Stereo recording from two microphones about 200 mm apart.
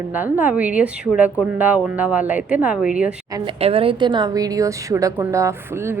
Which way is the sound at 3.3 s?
20° right (ahead or behind).